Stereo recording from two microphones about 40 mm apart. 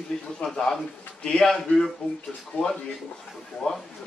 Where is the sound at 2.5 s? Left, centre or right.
Left.